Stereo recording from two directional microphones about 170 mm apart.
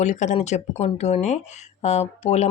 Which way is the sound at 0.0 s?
45° left (ahead or behind).